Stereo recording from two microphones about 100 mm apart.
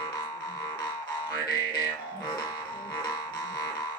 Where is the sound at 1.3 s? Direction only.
40° left (ahead or behind).